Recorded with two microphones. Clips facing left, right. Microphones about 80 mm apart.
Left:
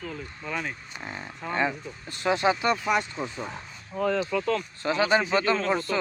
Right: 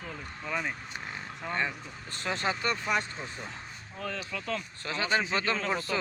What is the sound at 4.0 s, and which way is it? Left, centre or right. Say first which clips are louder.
Speech: left 12 dB; left.